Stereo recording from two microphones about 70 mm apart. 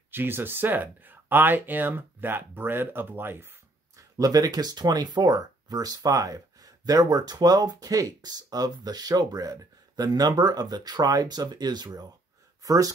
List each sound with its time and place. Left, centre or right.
0.1 s speech: right
3.9 s speech: right
12.6 s speech: right